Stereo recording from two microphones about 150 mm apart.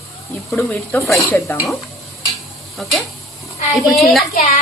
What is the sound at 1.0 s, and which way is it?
Speech, centre (ahead or behind).